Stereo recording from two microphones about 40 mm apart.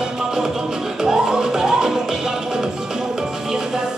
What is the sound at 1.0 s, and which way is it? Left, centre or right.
Music, centre.